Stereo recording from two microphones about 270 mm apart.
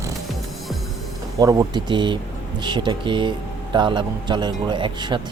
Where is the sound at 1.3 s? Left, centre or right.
Centre.